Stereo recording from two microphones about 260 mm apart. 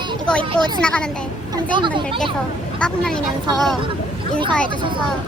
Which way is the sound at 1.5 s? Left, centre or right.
Centre.